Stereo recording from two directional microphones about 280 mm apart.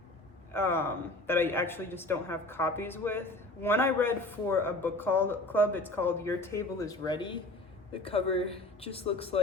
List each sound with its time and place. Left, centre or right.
0.5 s a woman's voice: centre